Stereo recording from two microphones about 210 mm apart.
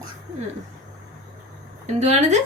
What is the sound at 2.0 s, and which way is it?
Speech, 30° right (ahead or behind).